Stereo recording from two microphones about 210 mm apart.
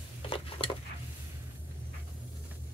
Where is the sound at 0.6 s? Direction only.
25° left (ahead or behind).